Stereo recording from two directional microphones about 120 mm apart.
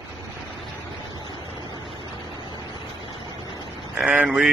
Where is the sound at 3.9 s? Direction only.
10° right (ahead or behind).